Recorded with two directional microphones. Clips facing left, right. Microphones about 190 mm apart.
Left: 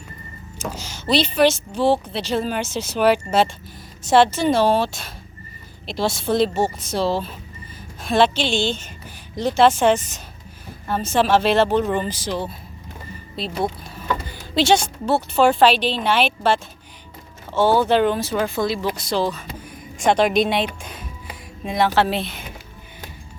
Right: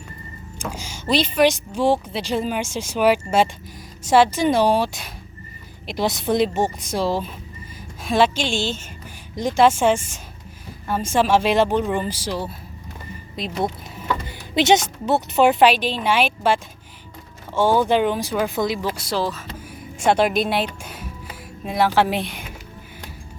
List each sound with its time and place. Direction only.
0.6 s speech: 10° right (ahead or behind)
14.3 s a woman's voice: 20° right (ahead or behind)
17.7 s speech: 10° right (ahead or behind)